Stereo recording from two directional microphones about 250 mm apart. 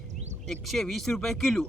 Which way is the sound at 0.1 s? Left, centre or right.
Right.